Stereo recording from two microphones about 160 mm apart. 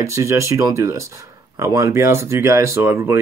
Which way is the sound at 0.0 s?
20° right (ahead or behind).